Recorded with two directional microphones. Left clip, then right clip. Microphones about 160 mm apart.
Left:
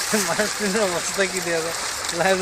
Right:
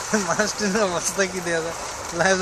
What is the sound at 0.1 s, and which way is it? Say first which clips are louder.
Speech: right 1 dB; 35° left (ahead or behind).